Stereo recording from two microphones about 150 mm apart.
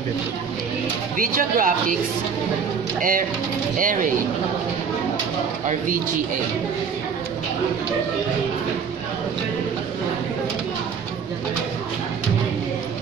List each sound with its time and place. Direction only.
1.1 s speech: 65° right (ahead or behind)
3.0 s speech: 65° right (ahead or behind)